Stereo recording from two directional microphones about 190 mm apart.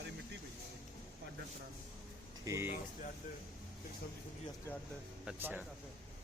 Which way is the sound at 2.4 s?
15° right (ahead or behind).